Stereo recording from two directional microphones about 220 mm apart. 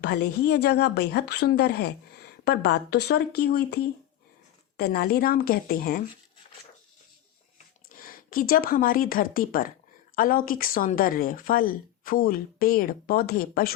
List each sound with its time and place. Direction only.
0.0 s speech: 50° left (ahead or behind)
4.8 s speech: 45° left (ahead or behind)
7.9 s a woman's voice: 40° left (ahead or behind)